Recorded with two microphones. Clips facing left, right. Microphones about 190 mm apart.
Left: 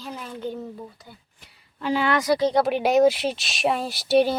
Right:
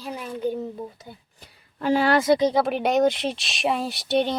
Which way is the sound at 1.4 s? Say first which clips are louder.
Right 3 dB; 45° right (ahead or behind).